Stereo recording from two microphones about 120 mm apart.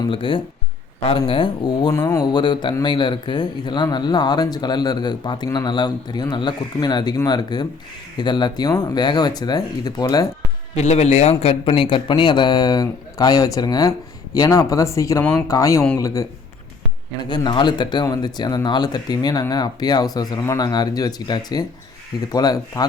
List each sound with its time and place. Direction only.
0.1 s speech: 45° left (ahead or behind)
2.0 s a man's voice: 25° left (ahead or behind)
10.8 s a man's voice: 65° left (ahead or behind); by 16.2 s 30° left (ahead or behind)
17.4 s a man's voice: 40° left (ahead or behind)